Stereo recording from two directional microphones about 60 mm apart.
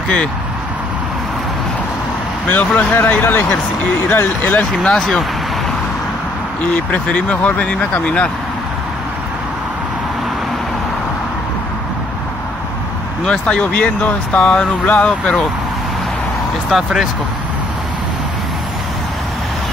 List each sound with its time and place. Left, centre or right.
2.4 s speech: left
4.8 s speech: centre
6.7 s speech: left
13.2 s speech: centre
16.7 s speech: centre